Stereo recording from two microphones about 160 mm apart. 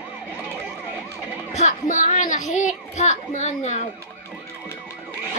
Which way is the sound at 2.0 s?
50° left (ahead or behind).